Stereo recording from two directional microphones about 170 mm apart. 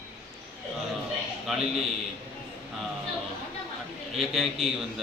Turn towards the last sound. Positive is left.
turn(degrees=0)  # may be behind; listen again after turning